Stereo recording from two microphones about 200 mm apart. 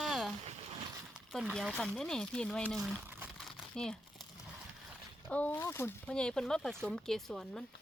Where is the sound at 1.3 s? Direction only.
Centre (ahead or behind).